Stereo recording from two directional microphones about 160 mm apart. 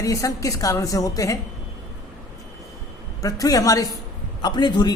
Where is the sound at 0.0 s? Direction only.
20° left (ahead or behind).